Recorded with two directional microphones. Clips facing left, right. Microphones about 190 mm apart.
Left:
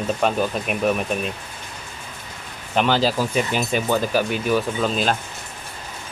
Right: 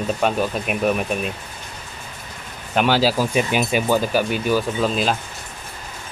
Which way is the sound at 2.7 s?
5° right (ahead or behind).